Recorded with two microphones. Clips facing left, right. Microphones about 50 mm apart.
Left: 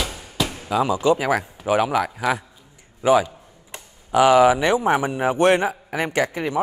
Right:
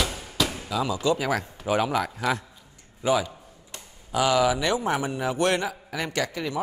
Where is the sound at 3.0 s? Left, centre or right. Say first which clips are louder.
Left 7 dB; left.